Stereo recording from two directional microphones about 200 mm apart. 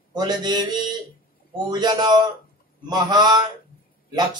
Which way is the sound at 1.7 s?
20° right (ahead or behind).